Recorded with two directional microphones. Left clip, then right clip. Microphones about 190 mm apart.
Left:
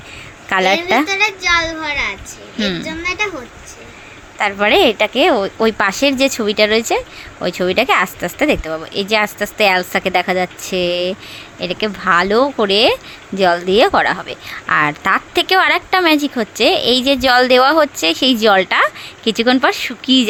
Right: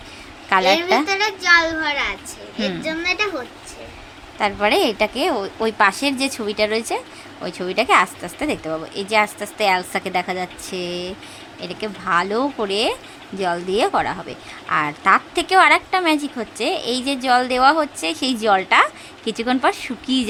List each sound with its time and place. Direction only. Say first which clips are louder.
0.5 s a woman's voice: left 2 dB; 15° left (ahead or behind)
1.4 s a child's voice: even; 15° right (ahead or behind)
2.6 s a woman's voice: left 5 dB; 10° left (ahead or behind)
4.4 s a woman's voice: left 5 dB; 15° left (ahead or behind)